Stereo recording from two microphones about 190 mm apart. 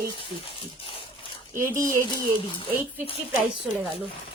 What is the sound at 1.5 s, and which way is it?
Speech, 10° right (ahead or behind).